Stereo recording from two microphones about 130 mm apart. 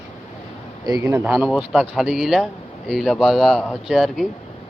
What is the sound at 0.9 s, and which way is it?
Speech, 30° right (ahead or behind).